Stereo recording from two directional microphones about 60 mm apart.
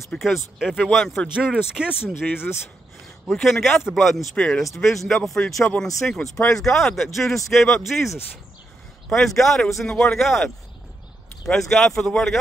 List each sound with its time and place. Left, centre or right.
0.2 s speech: centre
1.3 s speech: centre
2.1 s speech: left
3.3 s speech: centre
6.5 s speech: centre
11.4 s speech: centre